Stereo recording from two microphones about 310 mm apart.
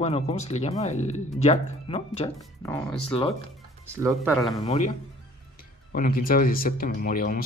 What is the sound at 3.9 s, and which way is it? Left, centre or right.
Speech, centre.